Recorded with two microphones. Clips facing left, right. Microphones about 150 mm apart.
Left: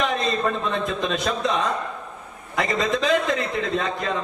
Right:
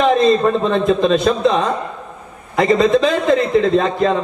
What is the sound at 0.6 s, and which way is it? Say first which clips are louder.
A man's voice: right 10 dB; 30° right (ahead or behind).